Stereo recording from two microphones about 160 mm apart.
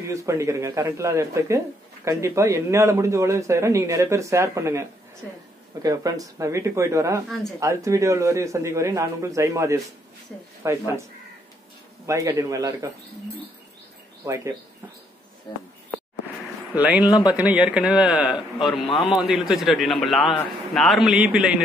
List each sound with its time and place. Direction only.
0.1 s a man's voice: 20° right (ahead or behind)
12.1 s a man's voice: 20° right (ahead or behind)
14.2 s a man's voice: 20° right (ahead or behind)
16.7 s a man's voice: 10° right (ahead or behind)